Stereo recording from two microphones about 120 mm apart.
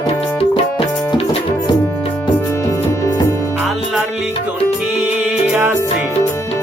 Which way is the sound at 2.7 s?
25° left (ahead or behind).